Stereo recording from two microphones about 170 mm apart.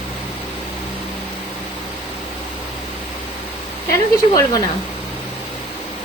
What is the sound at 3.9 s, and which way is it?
Speech, 15° left (ahead or behind).